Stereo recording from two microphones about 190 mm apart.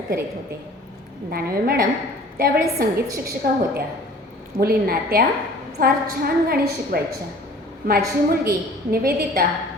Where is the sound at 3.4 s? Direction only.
55° right (ahead or behind).